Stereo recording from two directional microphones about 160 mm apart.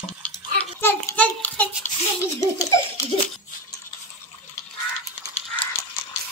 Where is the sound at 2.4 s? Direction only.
20° left (ahead or behind).